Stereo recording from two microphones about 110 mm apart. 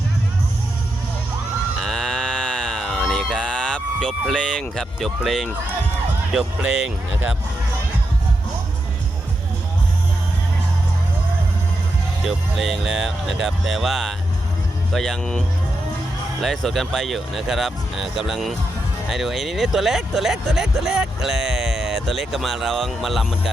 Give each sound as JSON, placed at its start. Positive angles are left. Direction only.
{"t": 1.8, "sound": "music", "side_deg": 5}
{"t": 4.3, "sound": "speech", "side_deg": 5}
{"t": 7.1, "sound": "speech", "side_deg": -15}
{"t": 12.2, "sound": "speech", "side_deg": 0}